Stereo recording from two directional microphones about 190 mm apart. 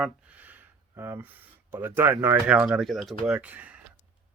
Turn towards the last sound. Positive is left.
turn(degrees=-5)  # may be behind; listen again after turning